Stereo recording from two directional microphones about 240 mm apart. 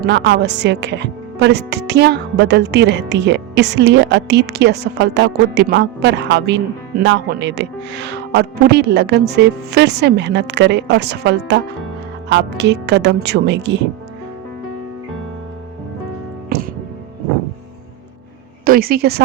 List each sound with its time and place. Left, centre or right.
0.0 s speech: right
18.6 s a woman's voice: right